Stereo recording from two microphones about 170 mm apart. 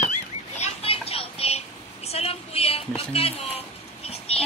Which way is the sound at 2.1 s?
35° left (ahead or behind).